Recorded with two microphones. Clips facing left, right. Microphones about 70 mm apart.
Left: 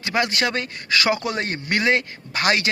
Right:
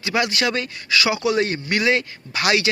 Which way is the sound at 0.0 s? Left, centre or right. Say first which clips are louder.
Right 1 dB; left.